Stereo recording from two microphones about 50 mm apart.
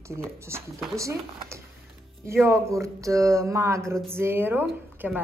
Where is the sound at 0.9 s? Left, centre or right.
Right.